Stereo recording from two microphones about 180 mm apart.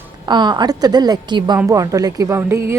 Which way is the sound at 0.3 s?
25° right (ahead or behind).